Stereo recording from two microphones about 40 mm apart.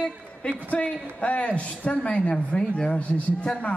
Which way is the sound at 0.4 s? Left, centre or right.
Left.